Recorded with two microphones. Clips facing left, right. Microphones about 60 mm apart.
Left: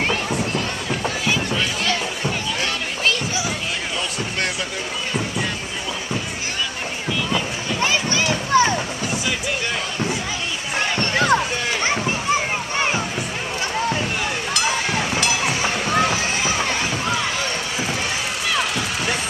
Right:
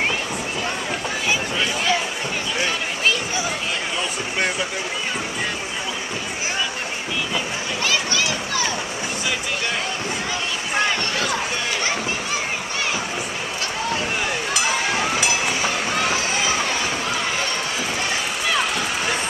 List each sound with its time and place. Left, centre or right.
1.0 s music: centre
7.8 s a sound: left
11.0 s run: left
12.7 s music: left
14.5 s a sound: centre
15.4 s run: centre
18.5 s vehicle: centre